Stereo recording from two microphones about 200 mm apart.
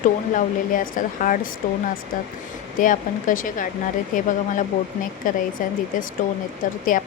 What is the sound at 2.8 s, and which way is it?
Speech, 40° left (ahead or behind).